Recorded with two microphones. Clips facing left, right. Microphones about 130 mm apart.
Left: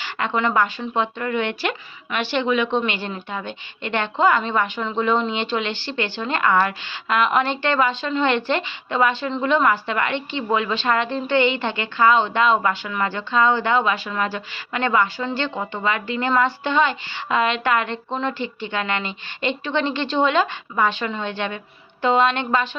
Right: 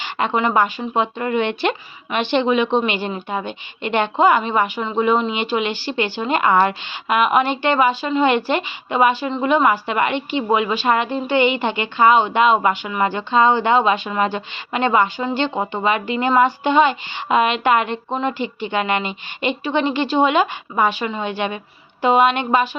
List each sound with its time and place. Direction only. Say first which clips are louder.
0.0 s a woman's voice: right 3 dB; 20° right (ahead or behind)